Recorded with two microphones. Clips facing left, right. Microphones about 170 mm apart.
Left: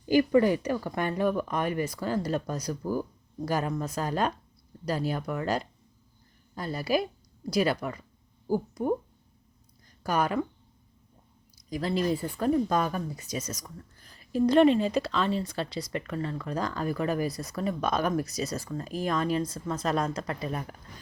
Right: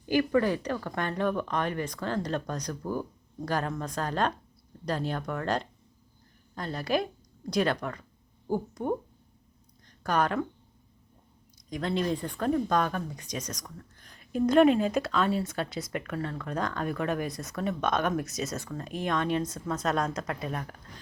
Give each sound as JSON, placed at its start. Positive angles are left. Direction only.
{"t": 0.1, "sound": "a woman's voice", "side_deg": 15}
{"t": 9.8, "sound": "a sound", "side_deg": 5}
{"t": 11.7, "sound": "speech", "side_deg": 5}